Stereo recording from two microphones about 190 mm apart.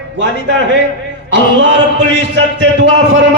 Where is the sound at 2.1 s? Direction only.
70° right (ahead or behind).